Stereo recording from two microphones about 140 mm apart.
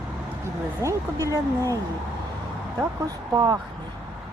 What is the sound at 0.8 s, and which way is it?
Speech, 25° right (ahead or behind).